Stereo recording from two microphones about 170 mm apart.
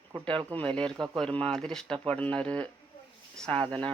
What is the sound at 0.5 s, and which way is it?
Speech, 10° left (ahead or behind).